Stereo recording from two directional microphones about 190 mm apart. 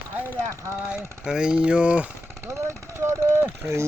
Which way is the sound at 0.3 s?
15° right (ahead or behind).